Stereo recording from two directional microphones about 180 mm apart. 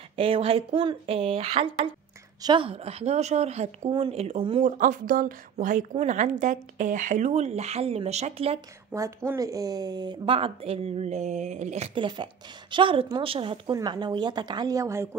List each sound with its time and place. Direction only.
0.1 s speech: 30° right (ahead or behind)
4.6 s a woman's voice: 45° right (ahead or behind)
8.9 s speech: 15° right (ahead or behind)